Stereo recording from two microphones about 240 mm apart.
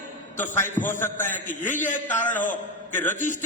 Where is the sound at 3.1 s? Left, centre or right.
Left.